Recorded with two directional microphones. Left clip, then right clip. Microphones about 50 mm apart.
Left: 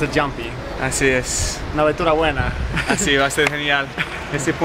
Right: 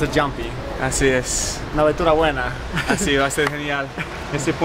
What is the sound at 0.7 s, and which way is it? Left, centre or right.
A man's voice, centre.